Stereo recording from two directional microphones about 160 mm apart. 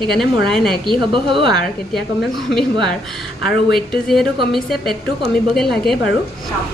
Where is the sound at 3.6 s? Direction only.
Centre (ahead or behind).